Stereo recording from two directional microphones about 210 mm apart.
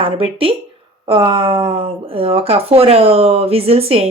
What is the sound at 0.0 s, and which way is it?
A woman's voice, 25° right (ahead or behind).